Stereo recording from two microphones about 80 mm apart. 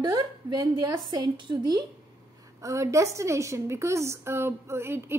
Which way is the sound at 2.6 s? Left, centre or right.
Right.